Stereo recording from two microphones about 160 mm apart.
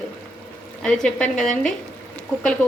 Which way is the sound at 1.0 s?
5° left (ahead or behind).